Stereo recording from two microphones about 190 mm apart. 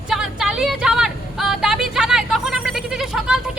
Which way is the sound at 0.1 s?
5° right (ahead or behind).